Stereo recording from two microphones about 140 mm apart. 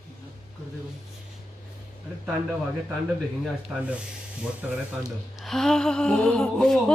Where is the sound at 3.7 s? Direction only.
10° right (ahead or behind).